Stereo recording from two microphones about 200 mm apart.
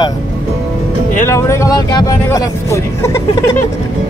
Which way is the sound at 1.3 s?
15° left (ahead or behind).